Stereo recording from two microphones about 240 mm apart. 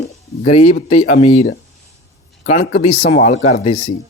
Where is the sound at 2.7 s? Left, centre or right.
Left.